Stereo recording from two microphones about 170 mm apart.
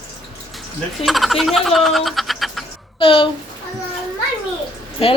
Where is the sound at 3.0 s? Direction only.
30° left (ahead or behind).